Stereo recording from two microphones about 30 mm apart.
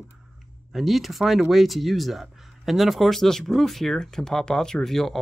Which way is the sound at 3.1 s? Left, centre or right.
Centre.